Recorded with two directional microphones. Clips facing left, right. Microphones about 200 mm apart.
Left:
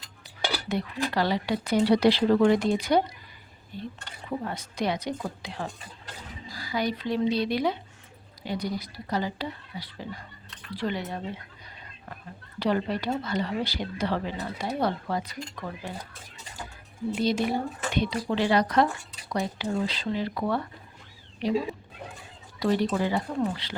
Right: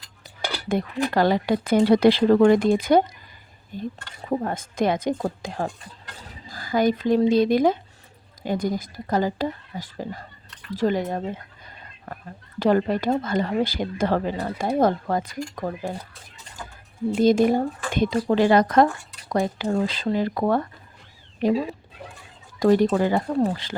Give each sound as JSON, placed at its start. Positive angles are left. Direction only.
{"t": 0.7, "sound": "speech", "side_deg": -50}
{"t": 12.5, "sound": "speech", "side_deg": -45}
{"t": 17.2, "sound": "speech", "side_deg": -45}
{"t": 22.6, "sound": "speech", "side_deg": -45}